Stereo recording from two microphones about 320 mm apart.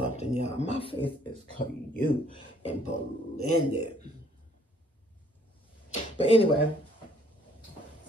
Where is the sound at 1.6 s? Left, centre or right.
Left.